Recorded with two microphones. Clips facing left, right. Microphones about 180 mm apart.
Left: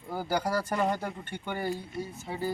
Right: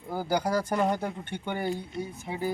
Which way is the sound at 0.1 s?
15° right (ahead or behind).